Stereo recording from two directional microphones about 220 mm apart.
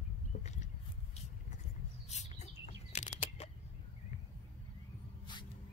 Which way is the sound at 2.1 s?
30° left (ahead or behind).